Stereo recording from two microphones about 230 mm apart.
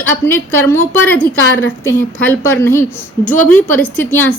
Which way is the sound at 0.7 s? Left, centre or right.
Centre.